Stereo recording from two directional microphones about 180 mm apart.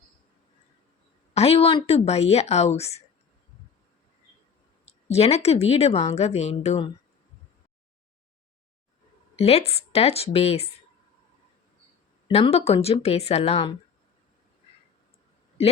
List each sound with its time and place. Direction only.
1.3 s speech: 35° left (ahead or behind)
5.1 s speech: 35° left (ahead or behind)
9.4 s speech: 35° left (ahead or behind)
12.3 s speech: 35° left (ahead or behind)